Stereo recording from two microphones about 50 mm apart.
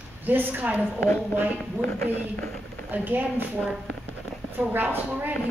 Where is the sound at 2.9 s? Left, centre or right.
Right.